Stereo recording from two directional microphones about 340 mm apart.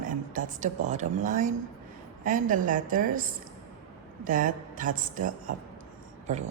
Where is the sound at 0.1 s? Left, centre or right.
Right.